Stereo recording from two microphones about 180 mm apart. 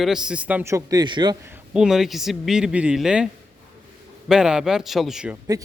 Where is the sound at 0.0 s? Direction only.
5° right (ahead or behind); by 1.4 s 25° right (ahead or behind).